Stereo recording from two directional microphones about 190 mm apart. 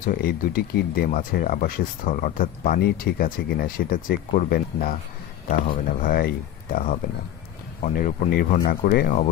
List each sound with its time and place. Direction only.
0.0 s speech: 50° left (ahead or behind)